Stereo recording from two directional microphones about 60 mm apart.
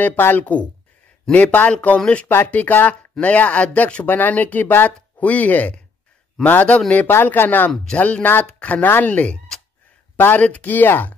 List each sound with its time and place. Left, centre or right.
0.0 s speech: left
7.1 s speech: left